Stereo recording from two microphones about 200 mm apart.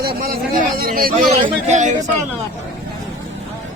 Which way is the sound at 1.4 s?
35° right (ahead or behind).